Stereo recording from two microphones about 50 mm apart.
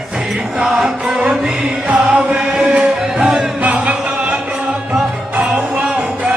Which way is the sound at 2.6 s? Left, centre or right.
Centre.